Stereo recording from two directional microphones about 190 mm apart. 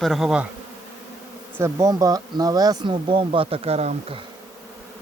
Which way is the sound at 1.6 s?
15° right (ahead or behind).